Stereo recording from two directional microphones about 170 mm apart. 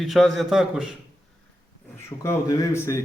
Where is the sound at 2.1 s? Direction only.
15° left (ahead or behind).